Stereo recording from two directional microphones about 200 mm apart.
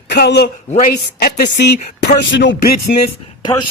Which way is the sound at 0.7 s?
40° left (ahead or behind).